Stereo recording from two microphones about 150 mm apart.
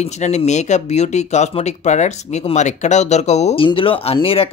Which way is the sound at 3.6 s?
35° left (ahead or behind).